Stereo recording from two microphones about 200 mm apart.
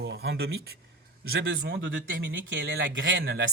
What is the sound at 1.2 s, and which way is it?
Speech, 80° right.